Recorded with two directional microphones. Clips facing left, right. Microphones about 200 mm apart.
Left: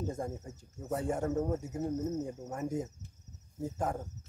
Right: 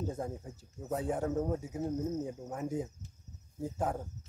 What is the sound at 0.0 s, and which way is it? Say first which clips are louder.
Speech: even; 5° right (ahead or behind).